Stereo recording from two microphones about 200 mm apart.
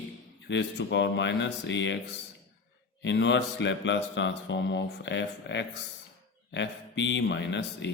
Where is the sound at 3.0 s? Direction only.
65° left (ahead or behind).